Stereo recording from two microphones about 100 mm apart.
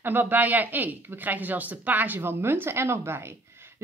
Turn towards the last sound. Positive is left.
turn(degrees=-25)  # may be behind; listen again after turning